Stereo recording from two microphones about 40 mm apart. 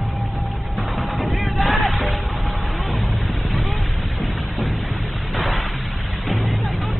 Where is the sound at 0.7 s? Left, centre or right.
Centre.